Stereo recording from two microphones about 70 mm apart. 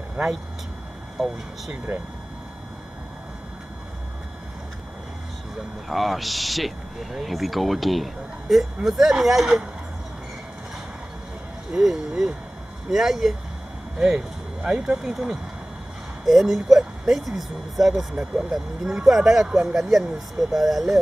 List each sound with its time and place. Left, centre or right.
0.2 s speech: centre
1.2 s speech: centre
1.9 s speech: centre
5.9 s speech: centre
11.7 s speech: centre